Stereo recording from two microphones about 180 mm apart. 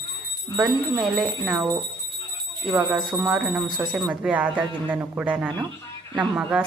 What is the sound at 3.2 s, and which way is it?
Speech, 5° right (ahead or behind).